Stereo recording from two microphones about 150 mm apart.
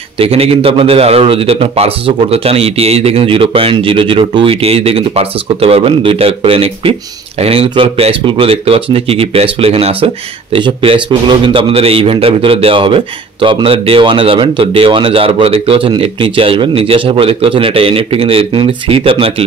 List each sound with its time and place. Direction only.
0.2 s a man's voice: 40° right (ahead or behind)